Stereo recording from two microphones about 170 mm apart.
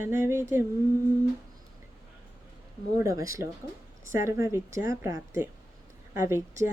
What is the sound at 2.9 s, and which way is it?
A woman's voice, 20° right (ahead or behind).